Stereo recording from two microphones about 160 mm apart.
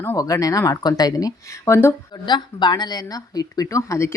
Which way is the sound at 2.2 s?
30° left (ahead or behind).